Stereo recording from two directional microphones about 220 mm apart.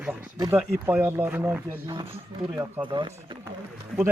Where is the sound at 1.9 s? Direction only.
25° right (ahead or behind).